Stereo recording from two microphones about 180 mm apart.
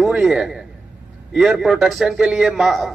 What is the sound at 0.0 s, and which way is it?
A man's voice, 5° right (ahead or behind).